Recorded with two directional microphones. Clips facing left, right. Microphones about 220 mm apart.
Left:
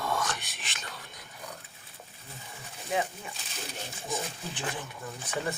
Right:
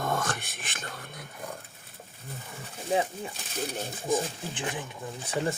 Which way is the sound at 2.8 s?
30° right (ahead or behind).